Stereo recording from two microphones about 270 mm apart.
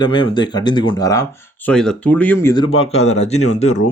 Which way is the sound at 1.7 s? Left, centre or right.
Centre.